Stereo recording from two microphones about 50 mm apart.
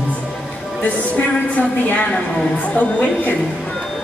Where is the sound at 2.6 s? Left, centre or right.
Left.